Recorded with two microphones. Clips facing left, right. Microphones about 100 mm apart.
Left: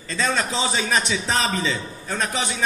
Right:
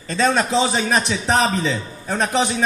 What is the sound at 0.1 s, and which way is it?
A man's voice, 20° right (ahead or behind).